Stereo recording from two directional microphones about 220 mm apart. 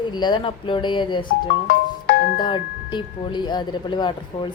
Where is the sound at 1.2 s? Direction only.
50° left (ahead or behind).